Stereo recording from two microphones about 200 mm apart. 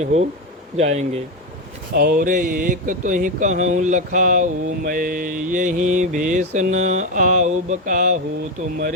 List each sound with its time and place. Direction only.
0.0 s speech: 35° right (ahead or behind)
2.0 s speech: 45° right (ahead or behind)